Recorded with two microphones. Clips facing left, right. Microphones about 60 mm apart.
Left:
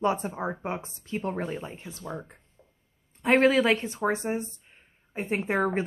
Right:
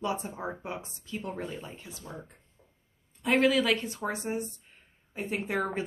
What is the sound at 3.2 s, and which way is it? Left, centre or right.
Speech, left.